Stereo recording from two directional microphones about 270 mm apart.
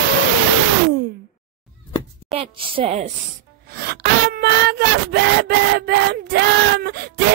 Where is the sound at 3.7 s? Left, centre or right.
Right.